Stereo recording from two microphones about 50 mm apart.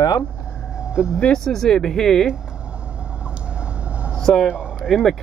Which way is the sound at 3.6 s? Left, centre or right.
Right.